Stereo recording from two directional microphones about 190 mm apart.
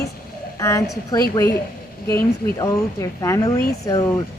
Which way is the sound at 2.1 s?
15° left (ahead or behind).